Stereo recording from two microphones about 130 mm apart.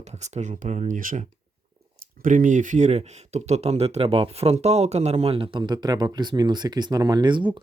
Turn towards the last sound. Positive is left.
turn(degrees=-35)  # may be behind; listen again after turning